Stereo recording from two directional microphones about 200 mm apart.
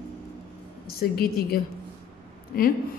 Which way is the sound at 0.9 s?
50° left (ahead or behind).